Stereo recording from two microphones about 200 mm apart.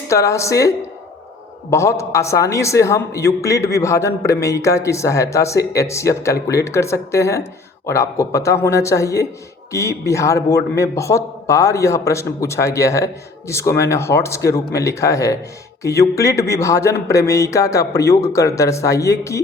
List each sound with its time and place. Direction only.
0.1 s a man's voice: 15° left (ahead or behind)
1.7 s a man's voice: 15° left (ahead or behind)